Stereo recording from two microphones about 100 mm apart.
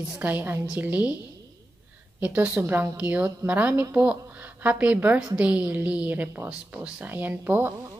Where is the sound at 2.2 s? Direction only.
15° right (ahead or behind).